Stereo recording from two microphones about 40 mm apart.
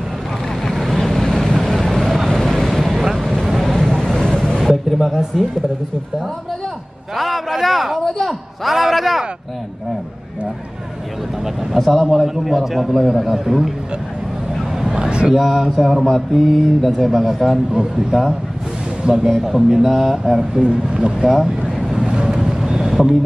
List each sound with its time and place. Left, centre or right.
0.6 s vehicle: centre
4.6 s a sound: centre
7.2 s a man's voice: centre
8.0 s speech: centre
8.3 s a man's voice: centre
11.7 s a man's voice: centre
15.0 s a sound: right
15.3 s a man's voice: centre
19.1 s speech: right
19.4 s a man's voice: centre
20.6 s speech: right
21.2 s vehicle: centre